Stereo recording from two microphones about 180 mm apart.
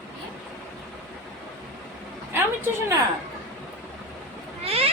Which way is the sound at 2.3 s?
15° right (ahead or behind).